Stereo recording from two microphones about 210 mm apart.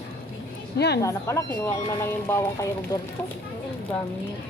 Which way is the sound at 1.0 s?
15° left (ahead or behind).